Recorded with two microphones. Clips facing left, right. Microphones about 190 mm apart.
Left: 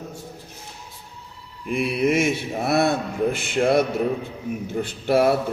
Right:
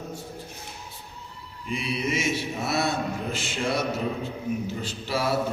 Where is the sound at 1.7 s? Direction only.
55° left (ahead or behind).